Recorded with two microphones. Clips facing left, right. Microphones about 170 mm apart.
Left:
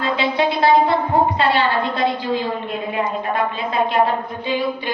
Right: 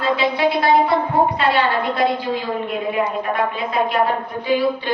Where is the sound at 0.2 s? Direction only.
25° left (ahead or behind).